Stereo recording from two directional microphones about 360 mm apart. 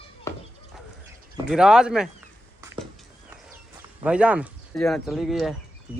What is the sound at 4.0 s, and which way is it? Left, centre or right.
Speech, centre.